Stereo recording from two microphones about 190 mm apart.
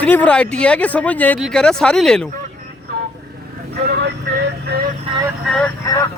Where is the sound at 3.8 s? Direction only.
60° right (ahead or behind).